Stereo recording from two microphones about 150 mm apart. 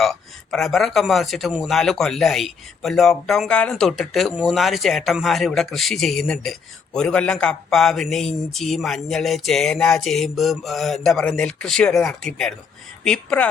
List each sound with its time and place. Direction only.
0.0 s a man's voice: centre (ahead or behind)